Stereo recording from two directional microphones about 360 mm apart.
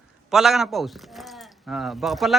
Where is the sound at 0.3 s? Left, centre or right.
Centre.